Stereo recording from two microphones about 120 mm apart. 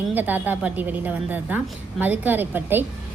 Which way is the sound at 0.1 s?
15° right (ahead or behind).